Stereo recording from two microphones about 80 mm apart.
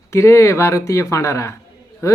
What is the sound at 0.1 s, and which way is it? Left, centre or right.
Speech, left.